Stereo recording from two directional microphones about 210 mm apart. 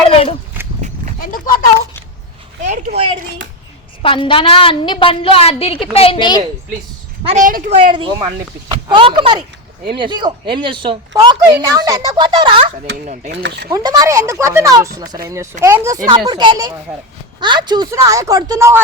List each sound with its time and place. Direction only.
0.1 s a woman's voice: 30° left (ahead or behind)
1.2 s speech: 40° left (ahead or behind)
2.6 s a woman's voice: 35° right (ahead or behind)
4.0 s a woman's voice: 25° left (ahead or behind)
7.3 s a woman's voice: 40° right (ahead or behind)
7.9 s a woman's voice: 20° right (ahead or behind)
13.3 s speech: 55° right (ahead or behind)
13.7 s a woman's voice: 15° right (ahead or behind)